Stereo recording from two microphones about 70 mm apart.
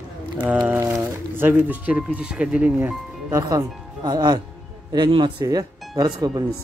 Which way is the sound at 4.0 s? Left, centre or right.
Right.